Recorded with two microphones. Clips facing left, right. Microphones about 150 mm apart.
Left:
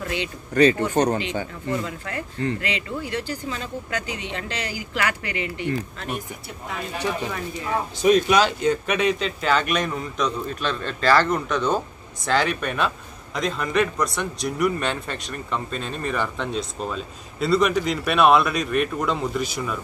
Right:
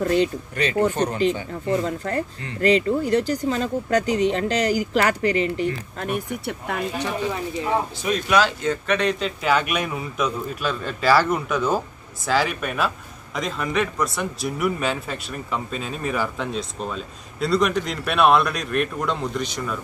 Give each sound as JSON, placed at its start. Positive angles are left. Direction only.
{"t": 0.0, "sound": "speech", "side_deg": -40}
{"t": 0.9, "sound": "speech", "side_deg": 40}
{"t": 1.5, "sound": "speech", "side_deg": -40}
{"t": 6.0, "sound": "speech", "side_deg": -60}
{"t": 7.3, "sound": "speech", "side_deg": -25}
{"t": 8.0, "sound": "a man's voice", "side_deg": 20}
{"t": 9.2, "sound": "a man's voice", "side_deg": -5}